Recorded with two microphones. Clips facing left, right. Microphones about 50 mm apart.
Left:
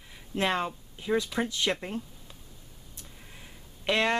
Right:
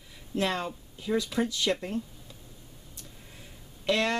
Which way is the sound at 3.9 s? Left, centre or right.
Centre.